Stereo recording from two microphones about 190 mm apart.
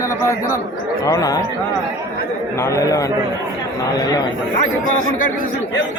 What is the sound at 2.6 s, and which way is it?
Speech, 15° left (ahead or behind).